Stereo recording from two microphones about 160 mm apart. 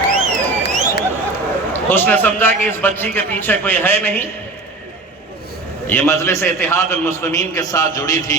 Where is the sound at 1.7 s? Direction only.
10° left (ahead or behind).